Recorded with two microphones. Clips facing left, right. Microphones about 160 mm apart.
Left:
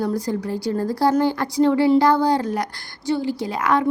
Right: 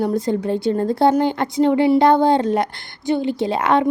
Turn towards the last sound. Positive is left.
turn(degrees=-25)  # may be behind; listen again after turning